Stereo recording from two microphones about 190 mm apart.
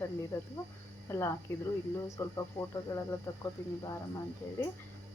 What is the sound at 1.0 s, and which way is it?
Speech, 15° left (ahead or behind).